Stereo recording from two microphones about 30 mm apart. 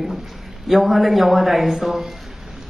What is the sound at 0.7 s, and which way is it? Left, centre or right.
A man's voice, centre.